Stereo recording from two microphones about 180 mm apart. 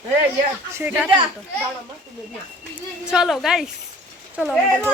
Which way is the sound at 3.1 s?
Centre (ahead or behind).